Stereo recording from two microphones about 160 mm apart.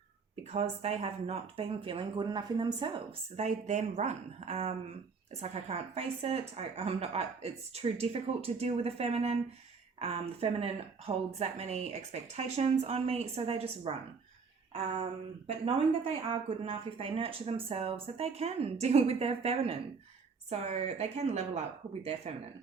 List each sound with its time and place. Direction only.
0.5 s speech: 40° right (ahead or behind)
3.3 s a woman's voice: 45° right (ahead or behind)
15.4 s a woman's voice: 35° right (ahead or behind)